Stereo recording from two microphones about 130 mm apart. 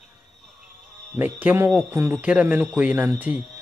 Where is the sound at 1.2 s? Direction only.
15° right (ahead or behind).